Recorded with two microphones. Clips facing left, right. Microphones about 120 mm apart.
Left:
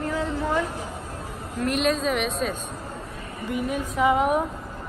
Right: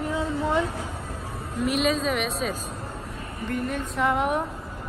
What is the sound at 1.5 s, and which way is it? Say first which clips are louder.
Speech: even; centre (ahead or behind).